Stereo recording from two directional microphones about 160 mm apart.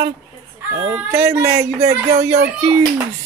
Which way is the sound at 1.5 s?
45° right (ahead or behind).